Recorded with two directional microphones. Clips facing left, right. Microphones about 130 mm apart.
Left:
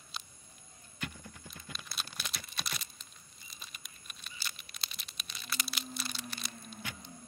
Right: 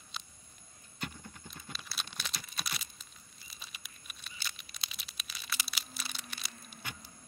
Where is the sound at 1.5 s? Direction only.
Centre (ahead or behind).